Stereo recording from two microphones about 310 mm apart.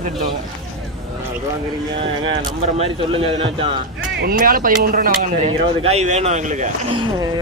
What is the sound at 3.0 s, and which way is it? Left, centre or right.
Speech, centre.